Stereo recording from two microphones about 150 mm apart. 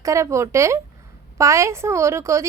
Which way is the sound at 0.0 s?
20° right (ahead or behind).